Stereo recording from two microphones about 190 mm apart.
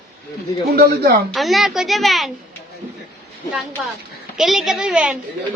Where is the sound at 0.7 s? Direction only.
50° right (ahead or behind).